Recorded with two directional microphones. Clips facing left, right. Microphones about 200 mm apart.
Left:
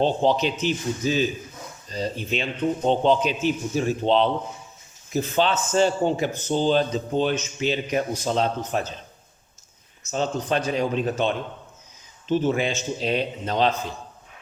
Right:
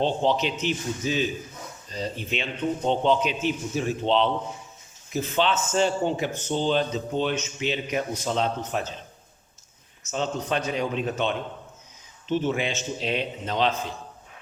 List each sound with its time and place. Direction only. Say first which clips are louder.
0.0 s a man's voice: left 3 dB; 40° left (ahead or behind)
5.4 s a man's voice: left 2 dB; 40° left (ahead or behind)
10.1 s a man's voice: left 3 dB; 35° left (ahead or behind)
12.3 s a man's voice: left 3 dB; 40° left (ahead or behind)